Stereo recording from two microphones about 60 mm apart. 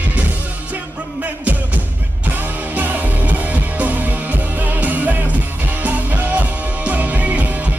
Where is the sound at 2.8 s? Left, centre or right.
Right.